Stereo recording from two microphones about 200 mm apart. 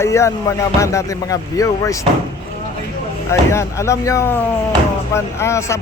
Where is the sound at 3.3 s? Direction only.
15° left (ahead or behind).